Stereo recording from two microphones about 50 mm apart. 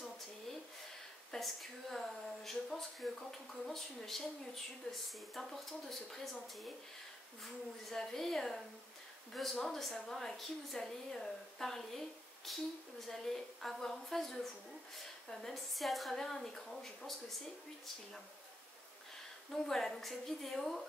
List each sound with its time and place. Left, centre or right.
1.3 s a woman's voice: centre
19.5 s a woman's voice: centre